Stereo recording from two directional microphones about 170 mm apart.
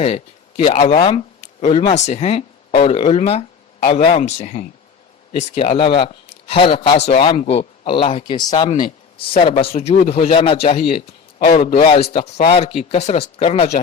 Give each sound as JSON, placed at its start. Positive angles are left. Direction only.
{"t": 0.6, "sound": "a man's voice", "side_deg": 35}